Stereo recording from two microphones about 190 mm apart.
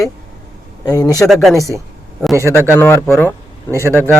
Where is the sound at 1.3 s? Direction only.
Centre (ahead or behind).